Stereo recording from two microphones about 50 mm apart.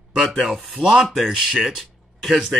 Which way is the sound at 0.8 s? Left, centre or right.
Centre.